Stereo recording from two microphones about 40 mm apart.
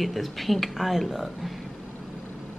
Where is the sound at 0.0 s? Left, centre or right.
Centre.